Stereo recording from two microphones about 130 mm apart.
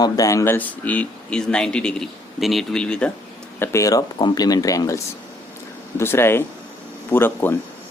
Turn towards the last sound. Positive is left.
turn(degrees=15)  # may be behind; listen again after turning